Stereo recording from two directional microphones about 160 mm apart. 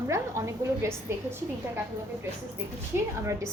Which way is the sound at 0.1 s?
15° right (ahead or behind).